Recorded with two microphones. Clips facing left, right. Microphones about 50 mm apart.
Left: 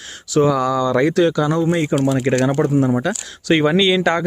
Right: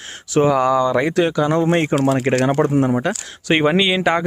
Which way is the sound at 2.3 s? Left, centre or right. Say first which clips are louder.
Even; right.